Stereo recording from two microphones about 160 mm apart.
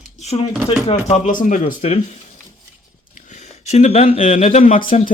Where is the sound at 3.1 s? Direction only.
50° left (ahead or behind).